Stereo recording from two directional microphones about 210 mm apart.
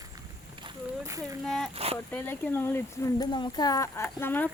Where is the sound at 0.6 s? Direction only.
15° right (ahead or behind).